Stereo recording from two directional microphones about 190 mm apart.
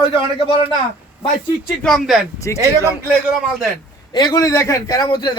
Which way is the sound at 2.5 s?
15° left (ahead or behind).